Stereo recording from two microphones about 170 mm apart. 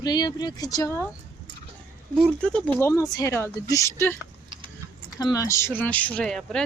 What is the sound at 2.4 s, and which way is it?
Speech, 5° left (ahead or behind).